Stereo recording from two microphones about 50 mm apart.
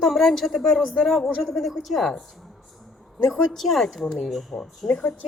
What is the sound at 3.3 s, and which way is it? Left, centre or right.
A woman's voice, centre.